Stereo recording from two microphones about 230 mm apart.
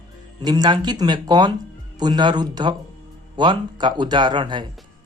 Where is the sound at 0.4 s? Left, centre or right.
Centre.